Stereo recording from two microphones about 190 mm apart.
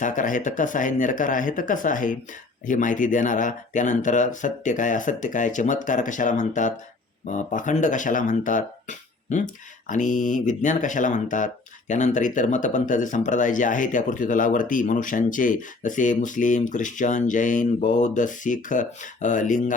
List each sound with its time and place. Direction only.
0.0 s speech: 45° left (ahead or behind)